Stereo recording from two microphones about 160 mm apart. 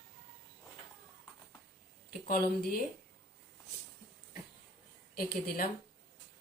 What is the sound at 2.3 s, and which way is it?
Speech, 65° left (ahead or behind).